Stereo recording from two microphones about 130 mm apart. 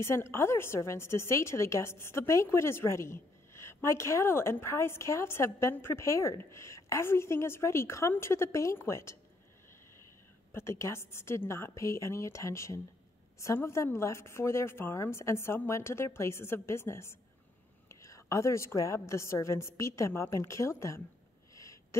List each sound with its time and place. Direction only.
0.0 s a woman's voice: 20° left (ahead or behind)
10.5 s a woman's voice: 20° left (ahead or behind)